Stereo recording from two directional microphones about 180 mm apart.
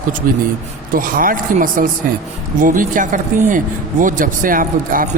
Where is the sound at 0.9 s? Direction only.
50° right (ahead or behind).